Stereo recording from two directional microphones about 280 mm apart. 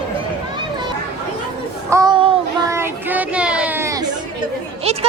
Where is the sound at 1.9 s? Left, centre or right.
Centre.